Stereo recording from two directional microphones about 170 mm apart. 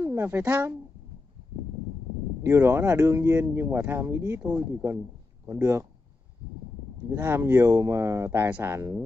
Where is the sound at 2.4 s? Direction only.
15° right (ahead or behind).